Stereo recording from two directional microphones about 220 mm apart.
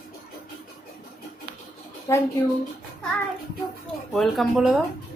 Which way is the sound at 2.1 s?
15° left (ahead or behind).